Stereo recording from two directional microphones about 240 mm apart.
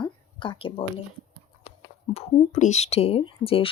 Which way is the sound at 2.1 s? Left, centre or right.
Left.